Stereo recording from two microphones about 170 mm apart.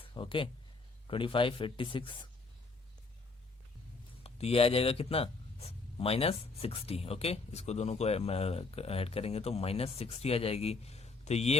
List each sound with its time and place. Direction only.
0.1 s speech: 30° left (ahead or behind)
4.2 s speech: 35° left (ahead or behind)